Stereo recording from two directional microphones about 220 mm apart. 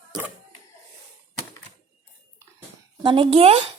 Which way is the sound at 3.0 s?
25° right (ahead or behind).